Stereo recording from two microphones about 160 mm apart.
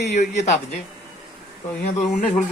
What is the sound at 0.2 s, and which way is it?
Speech, 45° left (ahead or behind).